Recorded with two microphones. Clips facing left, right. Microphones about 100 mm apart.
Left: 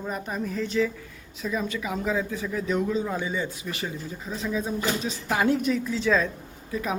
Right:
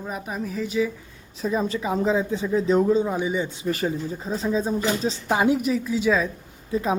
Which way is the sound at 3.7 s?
40° right (ahead or behind).